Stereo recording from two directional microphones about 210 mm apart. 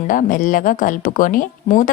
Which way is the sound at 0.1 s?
40° left (ahead or behind).